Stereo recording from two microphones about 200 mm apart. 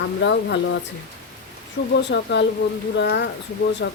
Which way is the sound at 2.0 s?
60° left (ahead or behind).